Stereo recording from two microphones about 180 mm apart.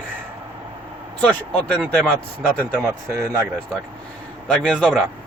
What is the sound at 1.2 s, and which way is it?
Speech, 5° left (ahead or behind).